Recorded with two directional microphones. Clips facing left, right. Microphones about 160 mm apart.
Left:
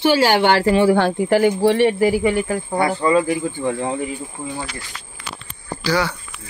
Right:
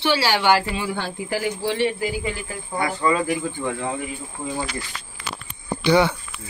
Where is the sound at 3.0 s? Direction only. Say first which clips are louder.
Left 2 dB; 30° left (ahead or behind).